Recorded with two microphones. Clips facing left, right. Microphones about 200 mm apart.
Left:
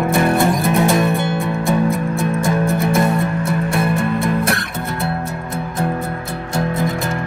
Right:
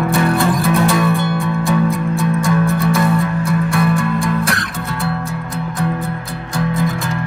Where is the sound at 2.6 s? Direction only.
20° left (ahead or behind).